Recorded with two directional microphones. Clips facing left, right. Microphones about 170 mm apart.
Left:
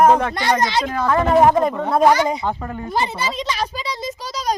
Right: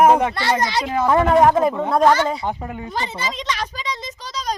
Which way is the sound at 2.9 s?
10° left (ahead or behind).